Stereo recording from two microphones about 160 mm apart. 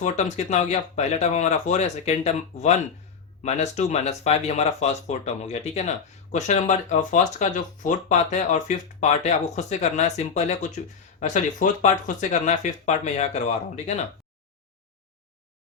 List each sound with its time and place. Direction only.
0.0 s speech: 50° left (ahead or behind)